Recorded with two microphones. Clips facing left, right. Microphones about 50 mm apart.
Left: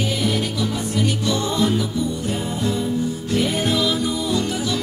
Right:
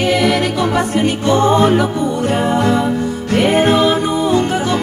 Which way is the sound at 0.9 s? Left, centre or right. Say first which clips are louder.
Right 6 dB; right.